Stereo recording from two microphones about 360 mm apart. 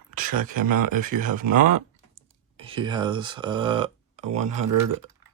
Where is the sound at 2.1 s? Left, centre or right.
Centre.